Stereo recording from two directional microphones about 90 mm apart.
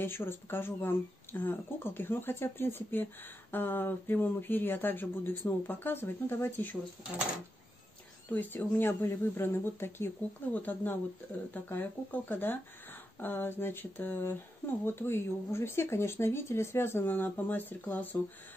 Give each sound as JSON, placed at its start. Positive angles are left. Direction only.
{"t": 0.0, "sound": "speech", "side_deg": 25}
{"t": 8.3, "sound": "speech", "side_deg": 20}